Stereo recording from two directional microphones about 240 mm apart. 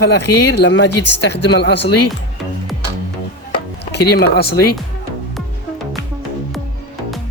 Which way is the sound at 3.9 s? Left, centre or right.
Left.